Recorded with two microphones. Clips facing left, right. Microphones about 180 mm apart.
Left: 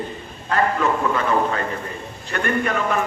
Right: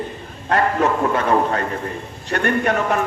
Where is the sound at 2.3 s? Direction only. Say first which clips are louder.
Right 4 dB; 45° right (ahead or behind).